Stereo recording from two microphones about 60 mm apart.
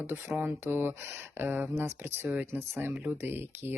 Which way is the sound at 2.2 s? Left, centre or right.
Right.